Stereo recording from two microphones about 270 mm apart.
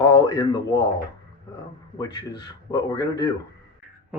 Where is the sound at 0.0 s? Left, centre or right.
Centre.